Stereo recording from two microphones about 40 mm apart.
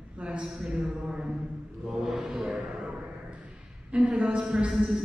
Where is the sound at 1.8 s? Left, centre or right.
Centre.